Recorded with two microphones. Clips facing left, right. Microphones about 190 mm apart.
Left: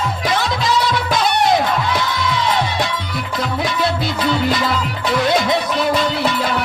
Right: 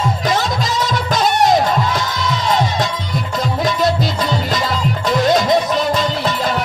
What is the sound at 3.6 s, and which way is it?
Music, 45° right (ahead or behind).